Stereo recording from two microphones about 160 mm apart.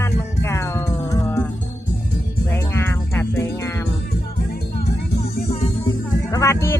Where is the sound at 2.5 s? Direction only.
15° left (ahead or behind).